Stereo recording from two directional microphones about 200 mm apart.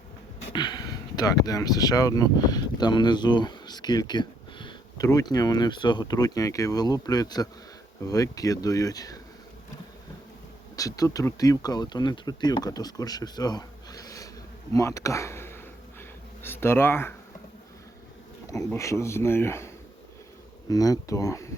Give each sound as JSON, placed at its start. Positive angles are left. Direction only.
{"t": 0.5, "sound": "speech", "side_deg": 20}
{"t": 10.8, "sound": "speech", "side_deg": 15}
{"t": 14.7, "sound": "a sound", "side_deg": 15}
{"t": 18.4, "sound": "speech", "side_deg": 15}